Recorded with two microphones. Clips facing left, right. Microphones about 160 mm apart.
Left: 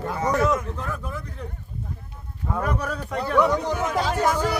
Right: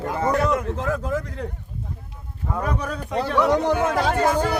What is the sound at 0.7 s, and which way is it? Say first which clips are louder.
Speech: right 7 dB; 90° right.